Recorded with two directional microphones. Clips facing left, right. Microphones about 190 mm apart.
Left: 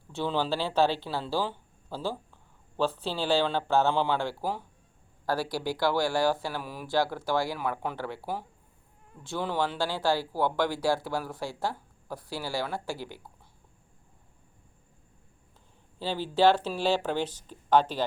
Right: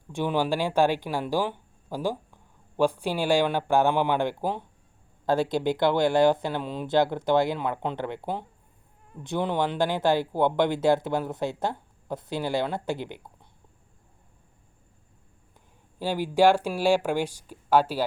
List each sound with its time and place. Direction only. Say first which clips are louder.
0.1 s speech: right 3 dB; 15° right (ahead or behind)
16.0 s speech: right 3 dB; 10° right (ahead or behind)